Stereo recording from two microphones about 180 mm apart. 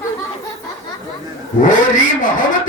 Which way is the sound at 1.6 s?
45° left (ahead or behind).